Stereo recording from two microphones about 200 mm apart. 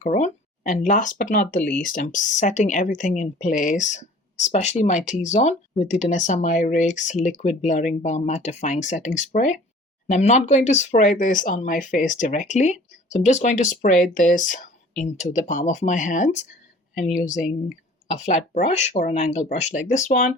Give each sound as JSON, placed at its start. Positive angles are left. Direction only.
{"t": 0.0, "sound": "speech", "side_deg": 35}
{"t": 16.9, "sound": "speech", "side_deg": 0}
{"t": 18.1, "sound": "speech", "side_deg": 35}